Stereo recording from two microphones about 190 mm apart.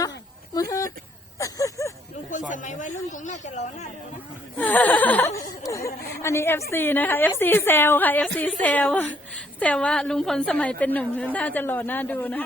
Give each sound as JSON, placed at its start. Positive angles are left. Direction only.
{"t": 0.5, "sound": "a woman's voice", "side_deg": 15}
{"t": 1.4, "sound": "a sound", "side_deg": 15}
{"t": 2.5, "sound": "speech", "side_deg": 40}
{"t": 4.5, "sound": "a woman's voice", "side_deg": 10}